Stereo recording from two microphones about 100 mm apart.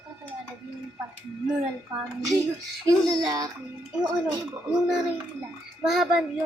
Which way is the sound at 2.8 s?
40° right (ahead or behind).